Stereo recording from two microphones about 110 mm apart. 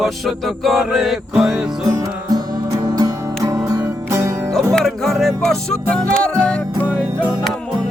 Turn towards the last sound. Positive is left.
turn(degrees=10)  # may be behind; listen again after turning